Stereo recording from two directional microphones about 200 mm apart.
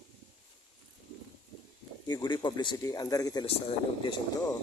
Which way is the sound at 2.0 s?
20° left (ahead or behind).